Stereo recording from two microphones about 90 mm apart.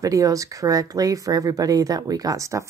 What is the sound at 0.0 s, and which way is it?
Speech, 40° right (ahead or behind).